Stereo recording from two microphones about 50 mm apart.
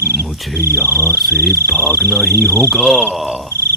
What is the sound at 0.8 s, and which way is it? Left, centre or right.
Speech, left.